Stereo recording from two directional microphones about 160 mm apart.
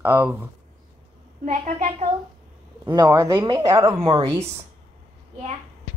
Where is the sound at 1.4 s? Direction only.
50° right (ahead or behind).